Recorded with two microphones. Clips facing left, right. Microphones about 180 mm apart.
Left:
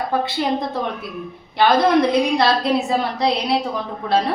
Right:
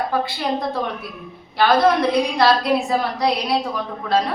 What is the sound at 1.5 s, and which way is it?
A woman's voice, 20° left (ahead or behind).